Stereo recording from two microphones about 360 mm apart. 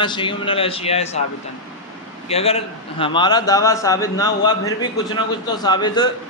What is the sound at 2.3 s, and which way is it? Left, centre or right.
A man's voice, centre.